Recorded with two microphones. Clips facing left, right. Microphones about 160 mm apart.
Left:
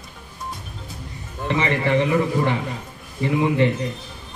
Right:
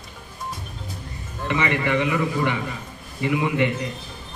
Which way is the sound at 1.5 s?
30° left (ahead or behind).